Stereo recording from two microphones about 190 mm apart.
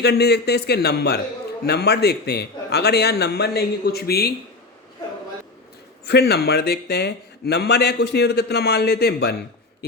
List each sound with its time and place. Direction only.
0.0 s speech: 60° left (ahead or behind)
6.1 s speech: 55° left (ahead or behind)